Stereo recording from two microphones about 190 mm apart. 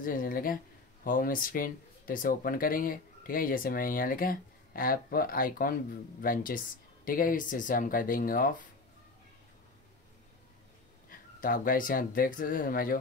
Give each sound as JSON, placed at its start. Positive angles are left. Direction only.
{"t": 0.0, "sound": "speech", "side_deg": 45}
{"t": 11.1, "sound": "speech", "side_deg": 45}